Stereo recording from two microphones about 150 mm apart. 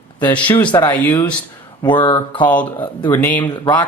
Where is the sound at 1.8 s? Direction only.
30° left (ahead or behind).